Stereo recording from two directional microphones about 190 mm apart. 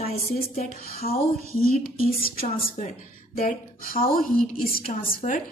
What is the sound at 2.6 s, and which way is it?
A woman's voice, 40° left (ahead or behind).